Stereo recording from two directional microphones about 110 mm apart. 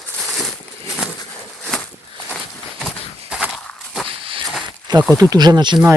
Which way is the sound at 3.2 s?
10° right (ahead or behind).